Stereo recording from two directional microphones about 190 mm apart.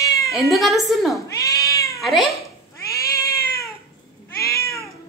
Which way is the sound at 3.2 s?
55° left (ahead or behind).